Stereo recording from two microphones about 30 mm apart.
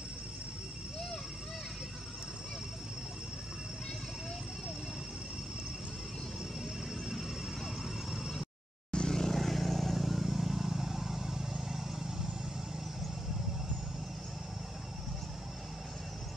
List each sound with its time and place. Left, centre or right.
7.1 s vehicle: centre
8.9 s vehicle: left
9.3 s vehicle: centre